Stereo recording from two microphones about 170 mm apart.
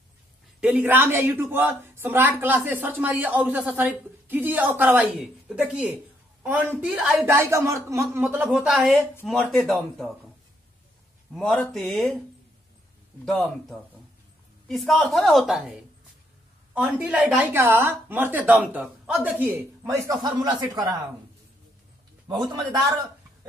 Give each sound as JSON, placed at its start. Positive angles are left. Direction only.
{"t": 0.6, "sound": "a woman's voice", "side_deg": -10}
{"t": 11.3, "sound": "a woman's voice", "side_deg": 0}
{"t": 13.2, "sound": "a woman's voice", "side_deg": 0}
{"t": 22.3, "sound": "a man's voice", "side_deg": -25}